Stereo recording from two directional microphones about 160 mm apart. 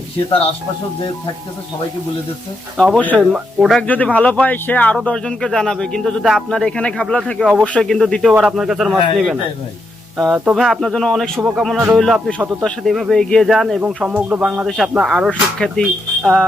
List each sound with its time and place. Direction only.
0.3 s speech: 35° left (ahead or behind)
2.8 s a man's voice: 5° left (ahead or behind)
3.8 s a man's voice: 10° left (ahead or behind)